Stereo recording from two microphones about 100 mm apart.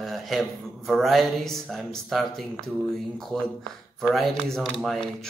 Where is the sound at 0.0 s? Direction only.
Centre (ahead or behind).